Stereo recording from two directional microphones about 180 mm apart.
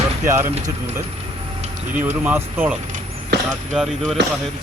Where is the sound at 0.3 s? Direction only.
15° right (ahead or behind).